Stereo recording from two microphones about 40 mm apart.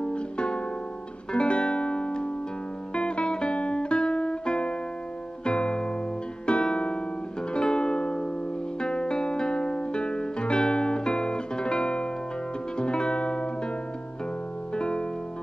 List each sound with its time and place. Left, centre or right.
0.0 s music: left
14.8 s music: left